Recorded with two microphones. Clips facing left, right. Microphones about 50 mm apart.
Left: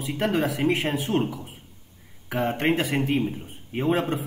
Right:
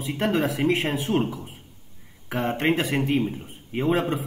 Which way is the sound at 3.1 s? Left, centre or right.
Right.